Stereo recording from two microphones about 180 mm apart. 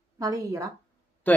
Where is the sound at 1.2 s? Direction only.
10° left (ahead or behind).